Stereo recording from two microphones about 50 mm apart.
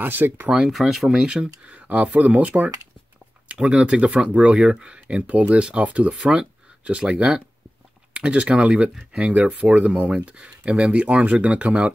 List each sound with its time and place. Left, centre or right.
0.0 s speech: right
0.5 s speech: centre
0.7 s speech: centre
1.2 s speech: centre